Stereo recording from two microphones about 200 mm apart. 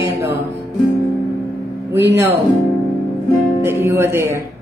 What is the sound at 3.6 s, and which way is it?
Speech, 10° right (ahead or behind).